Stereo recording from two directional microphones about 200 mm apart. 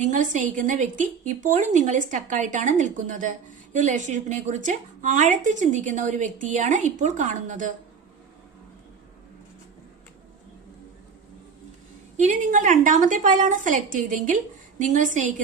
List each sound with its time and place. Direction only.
0.0 s a woman's voice: 40° right (ahead or behind)
12.1 s a woman's voice: 35° right (ahead or behind)